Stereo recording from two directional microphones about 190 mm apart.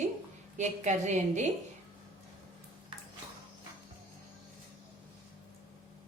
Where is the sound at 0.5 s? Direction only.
40° right (ahead or behind).